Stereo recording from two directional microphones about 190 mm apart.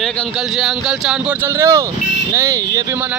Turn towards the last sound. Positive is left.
turn(degrees=-15)  # may be behind; listen again after turning